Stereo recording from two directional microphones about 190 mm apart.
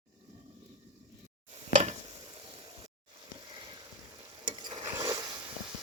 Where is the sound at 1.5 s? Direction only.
40° right (ahead or behind).